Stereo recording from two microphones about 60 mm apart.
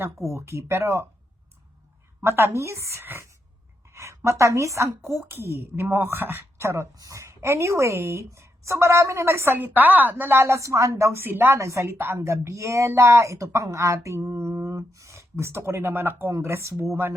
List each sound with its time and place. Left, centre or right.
0.3 s speech: right
2.2 s speech: right
3.8 s a woman's voice: right
6.9 s a woman's voice: right
7.2 s speech: right
9.6 s speech: right
10.4 s a woman's voice: right
11.2 s speech: right
11.5 s speech: right
12.2 s speech: right